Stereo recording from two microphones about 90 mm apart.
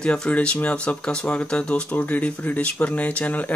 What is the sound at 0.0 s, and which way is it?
Speech, 10° left (ahead or behind).